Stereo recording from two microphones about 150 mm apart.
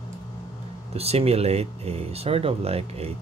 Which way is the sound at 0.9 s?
45° right (ahead or behind).